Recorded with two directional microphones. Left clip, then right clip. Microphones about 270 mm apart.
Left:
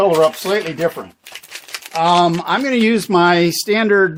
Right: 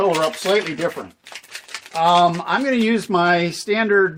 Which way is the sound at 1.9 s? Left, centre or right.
Left.